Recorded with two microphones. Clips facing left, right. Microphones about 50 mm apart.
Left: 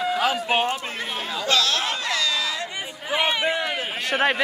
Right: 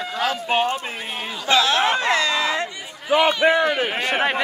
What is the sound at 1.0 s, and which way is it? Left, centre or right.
Chatter, right.